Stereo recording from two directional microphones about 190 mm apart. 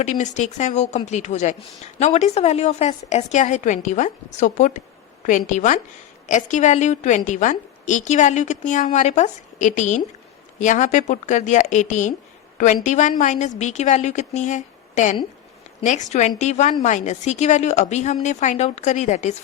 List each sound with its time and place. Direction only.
0.0 s a woman's voice: 40° left (ahead or behind)